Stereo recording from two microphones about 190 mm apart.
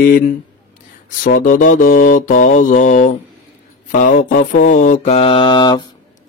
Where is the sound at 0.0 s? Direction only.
45° left (ahead or behind).